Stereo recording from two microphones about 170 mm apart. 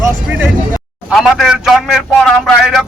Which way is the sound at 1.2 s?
Centre (ahead or behind).